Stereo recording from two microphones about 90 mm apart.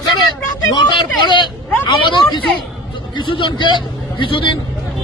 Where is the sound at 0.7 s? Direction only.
55° left (ahead or behind).